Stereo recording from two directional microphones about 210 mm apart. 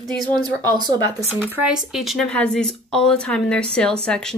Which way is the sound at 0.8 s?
20° right (ahead or behind).